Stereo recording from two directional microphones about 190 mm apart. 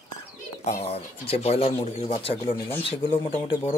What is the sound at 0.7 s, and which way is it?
Speech, 35° left (ahead or behind).